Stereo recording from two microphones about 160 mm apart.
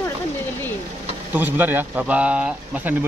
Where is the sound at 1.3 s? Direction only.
10° right (ahead or behind).